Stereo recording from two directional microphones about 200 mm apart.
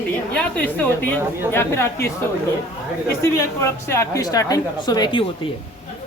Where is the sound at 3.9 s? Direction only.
15° left (ahead or behind).